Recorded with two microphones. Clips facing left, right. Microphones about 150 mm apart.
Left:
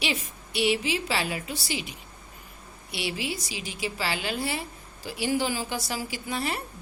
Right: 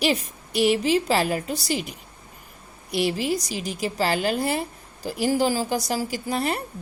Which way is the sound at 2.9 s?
45° right (ahead or behind).